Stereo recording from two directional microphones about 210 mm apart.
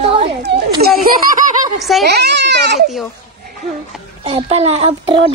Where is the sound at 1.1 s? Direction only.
45° right (ahead or behind).